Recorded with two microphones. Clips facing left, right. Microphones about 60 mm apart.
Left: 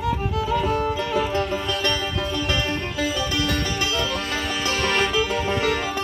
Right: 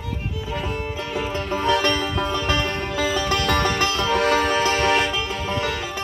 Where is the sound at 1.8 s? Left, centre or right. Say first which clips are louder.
Right 3 dB; right.